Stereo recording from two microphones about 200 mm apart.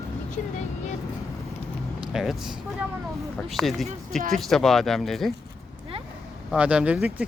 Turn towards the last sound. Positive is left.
turn(degrees=-5)  # may be behind; listen again after turning